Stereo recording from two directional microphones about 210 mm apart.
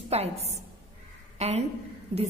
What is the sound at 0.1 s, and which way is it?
A woman's voice, 30° right (ahead or behind).